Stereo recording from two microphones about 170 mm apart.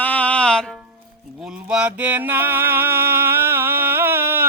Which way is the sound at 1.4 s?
5° right (ahead or behind).